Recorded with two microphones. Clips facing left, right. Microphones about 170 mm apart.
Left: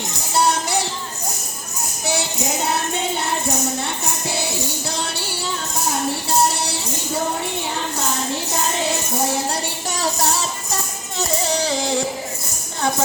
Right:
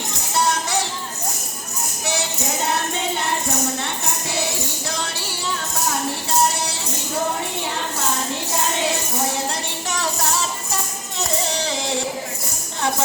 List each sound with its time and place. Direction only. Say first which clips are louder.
0.3 s music: left 2 dB; 35° left (ahead or behind)
9.9 s music: left 2 dB; 35° left (ahead or behind)
11.6 s a sound: left 3 dB; 35° left (ahead or behind)